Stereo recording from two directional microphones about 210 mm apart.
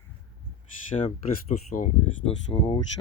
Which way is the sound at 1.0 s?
25° left (ahead or behind).